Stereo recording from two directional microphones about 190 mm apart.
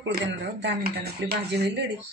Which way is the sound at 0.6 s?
60° right (ahead or behind).